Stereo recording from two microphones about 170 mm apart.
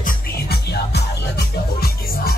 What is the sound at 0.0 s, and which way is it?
Music, 65° left (ahead or behind).